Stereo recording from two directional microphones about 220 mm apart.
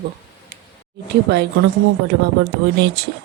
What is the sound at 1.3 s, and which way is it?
Speech, 50° right (ahead or behind).